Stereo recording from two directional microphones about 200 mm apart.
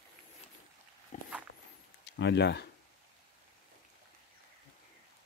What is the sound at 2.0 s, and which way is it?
Speech, 60° left (ahead or behind).